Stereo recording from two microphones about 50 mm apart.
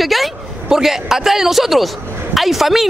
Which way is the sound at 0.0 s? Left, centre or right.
Centre.